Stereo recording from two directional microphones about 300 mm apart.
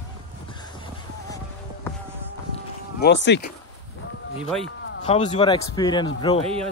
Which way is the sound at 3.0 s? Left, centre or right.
Left.